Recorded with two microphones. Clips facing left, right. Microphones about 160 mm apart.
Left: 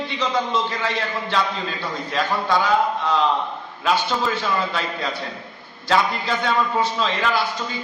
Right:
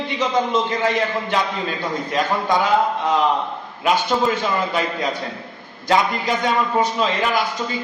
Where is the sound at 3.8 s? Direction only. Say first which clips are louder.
Right 3 dB; 15° right (ahead or behind).